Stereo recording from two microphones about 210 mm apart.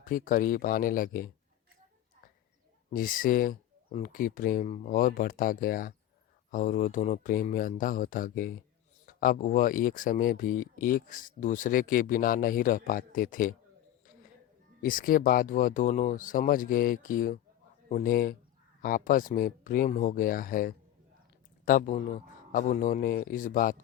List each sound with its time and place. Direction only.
0.0 s speech: 40° left (ahead or behind)
2.9 s speech: 40° left (ahead or behind)
14.8 s speech: 40° left (ahead or behind)